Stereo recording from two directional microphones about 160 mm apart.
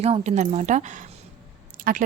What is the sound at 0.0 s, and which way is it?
Speech, 45° right (ahead or behind).